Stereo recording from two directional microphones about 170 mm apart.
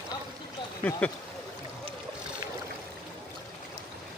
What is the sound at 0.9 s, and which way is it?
Speech, 10° left (ahead or behind).